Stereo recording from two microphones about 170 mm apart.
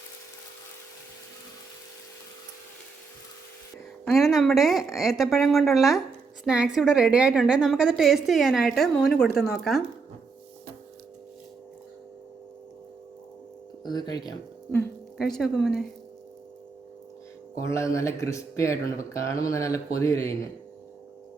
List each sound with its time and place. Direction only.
4.0 s a woman's voice: centre (ahead or behind)
13.8 s speech: 25° left (ahead or behind)
15.2 s a woman's voice: centre (ahead or behind)
17.7 s speech: 15° left (ahead or behind)